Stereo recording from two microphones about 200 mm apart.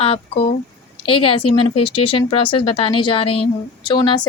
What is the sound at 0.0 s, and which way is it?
Speech, 30° left (ahead or behind).